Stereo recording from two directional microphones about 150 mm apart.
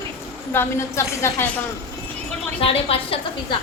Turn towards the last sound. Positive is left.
turn(degrees=40)  # may be behind; listen again after turning